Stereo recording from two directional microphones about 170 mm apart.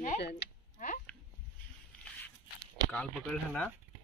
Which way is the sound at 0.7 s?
50° left (ahead or behind).